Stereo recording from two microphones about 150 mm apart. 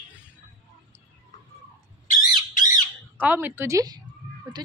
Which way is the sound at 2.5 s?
60° left (ahead or behind).